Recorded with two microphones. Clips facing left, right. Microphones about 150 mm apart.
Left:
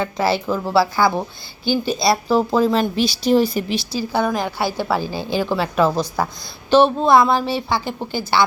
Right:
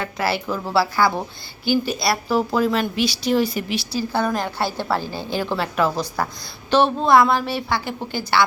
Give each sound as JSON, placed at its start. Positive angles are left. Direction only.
{"t": 0.0, "sound": "a woman's voice", "side_deg": 20}
{"t": 1.7, "sound": "a woman's voice", "side_deg": 25}
{"t": 3.9, "sound": "a woman's voice", "side_deg": 10}